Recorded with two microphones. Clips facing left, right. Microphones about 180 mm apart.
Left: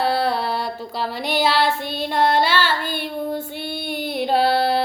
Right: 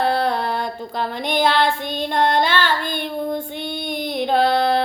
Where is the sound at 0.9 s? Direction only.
5° left (ahead or behind).